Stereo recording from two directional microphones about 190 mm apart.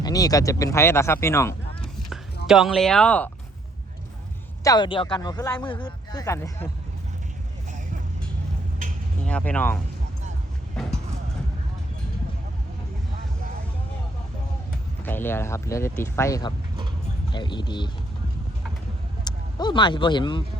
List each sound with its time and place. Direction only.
0.0 s speech: 20° left (ahead or behind)
2.5 s speech: centre (ahead or behind)
4.6 s speech: 20° left (ahead or behind)
9.2 s speech: 5° left (ahead or behind)
15.0 s speech: 10° left (ahead or behind)
19.2 s speech: 20° left (ahead or behind)